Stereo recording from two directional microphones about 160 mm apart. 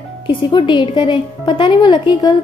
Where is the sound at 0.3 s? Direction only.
30° left (ahead or behind).